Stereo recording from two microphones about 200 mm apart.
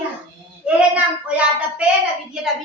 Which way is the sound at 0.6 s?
5° right (ahead or behind).